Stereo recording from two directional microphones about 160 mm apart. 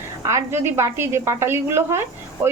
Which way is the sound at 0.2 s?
20° right (ahead or behind).